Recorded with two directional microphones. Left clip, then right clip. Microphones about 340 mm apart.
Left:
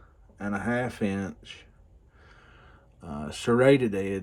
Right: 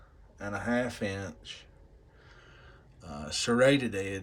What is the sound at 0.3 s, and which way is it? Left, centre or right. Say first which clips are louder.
Speech: left 2 dB; centre.